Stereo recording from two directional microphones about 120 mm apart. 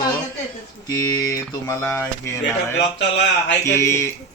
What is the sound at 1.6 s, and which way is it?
Speech, 25° left (ahead or behind).